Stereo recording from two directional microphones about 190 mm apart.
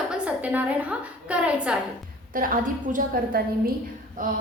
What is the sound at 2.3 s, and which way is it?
Speech, 50° right (ahead or behind).